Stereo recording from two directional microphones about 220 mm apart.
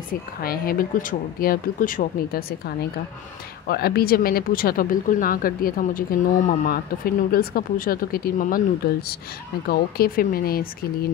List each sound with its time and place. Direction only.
0.1 s speech: 40° left (ahead or behind)
9.7 s speech: 40° left (ahead or behind)